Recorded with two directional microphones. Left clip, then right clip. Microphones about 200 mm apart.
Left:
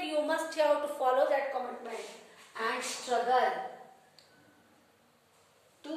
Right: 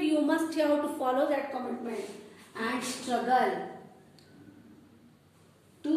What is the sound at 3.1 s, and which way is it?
Speech, 5° left (ahead or behind).